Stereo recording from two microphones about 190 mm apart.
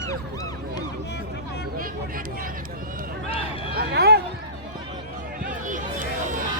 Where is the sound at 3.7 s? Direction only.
55° right (ahead or behind).